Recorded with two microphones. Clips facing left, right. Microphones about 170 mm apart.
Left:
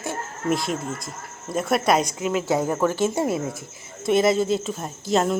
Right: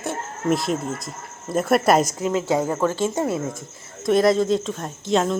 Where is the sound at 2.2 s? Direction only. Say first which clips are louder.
Right 1 dB; 25° right (ahead or behind).